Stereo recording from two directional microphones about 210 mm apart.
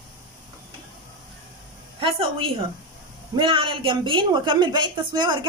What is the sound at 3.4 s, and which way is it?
A woman's voice, 25° right (ahead or behind).